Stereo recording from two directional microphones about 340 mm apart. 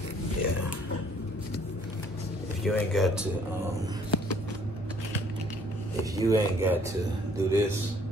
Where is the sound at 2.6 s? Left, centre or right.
Centre.